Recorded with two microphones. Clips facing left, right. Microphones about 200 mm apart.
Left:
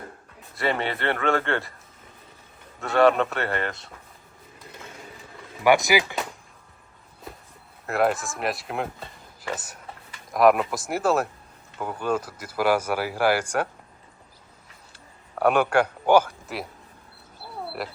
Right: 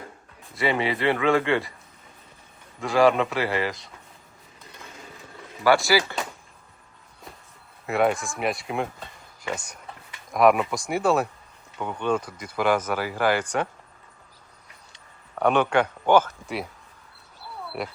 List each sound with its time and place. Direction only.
0.5 s speech: centre (ahead or behind)
2.8 s speech: centre (ahead or behind)
5.6 s speech: 20° left (ahead or behind)
7.9 s speech: centre (ahead or behind)
14.9 s a sound: 5° left (ahead or behind)
17.8 s speech: centre (ahead or behind)